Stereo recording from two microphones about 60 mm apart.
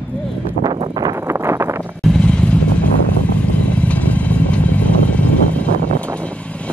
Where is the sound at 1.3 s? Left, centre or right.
Right.